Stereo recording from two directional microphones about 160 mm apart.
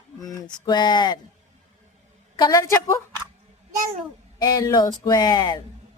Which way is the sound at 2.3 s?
25° left (ahead or behind).